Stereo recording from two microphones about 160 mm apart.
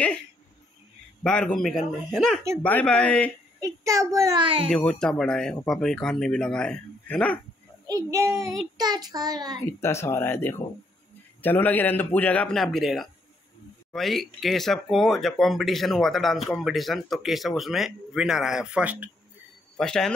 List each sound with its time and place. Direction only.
1.2 s a man's voice: 5° left (ahead or behind)
3.6 s child singing: 20° right (ahead or behind)
4.6 s speech: 5° left (ahead or behind)
7.8 s child singing: 20° right (ahead or behind)
9.7 s a man's voice: 15° left (ahead or behind); by 19.0 s 10° right (ahead or behind)
19.8 s speech: 5° left (ahead or behind)